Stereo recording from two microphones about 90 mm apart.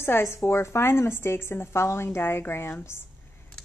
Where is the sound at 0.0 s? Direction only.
30° left (ahead or behind).